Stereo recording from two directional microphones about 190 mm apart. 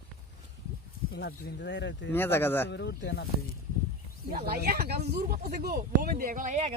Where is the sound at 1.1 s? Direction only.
65° left (ahead or behind).